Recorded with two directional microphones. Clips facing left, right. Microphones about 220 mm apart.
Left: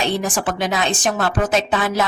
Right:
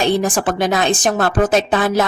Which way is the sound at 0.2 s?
45° right (ahead or behind).